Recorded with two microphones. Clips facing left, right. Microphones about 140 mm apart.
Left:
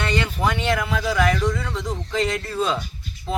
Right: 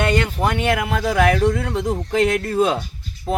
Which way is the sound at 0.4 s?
50° right (ahead or behind).